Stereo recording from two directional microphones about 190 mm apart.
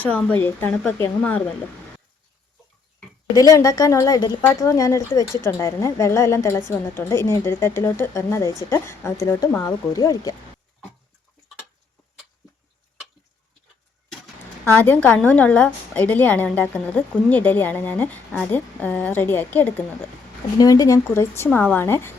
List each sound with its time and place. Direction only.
0.0 s a woman's voice: 5° left (ahead or behind)
3.3 s a woman's voice: 20° left (ahead or behind)
14.6 s a woman's voice: 10° left (ahead or behind)
20.6 s a woman's voice: 20° left (ahead or behind)